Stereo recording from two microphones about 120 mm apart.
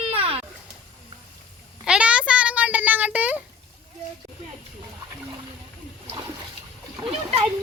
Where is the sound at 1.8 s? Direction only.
10° right (ahead or behind).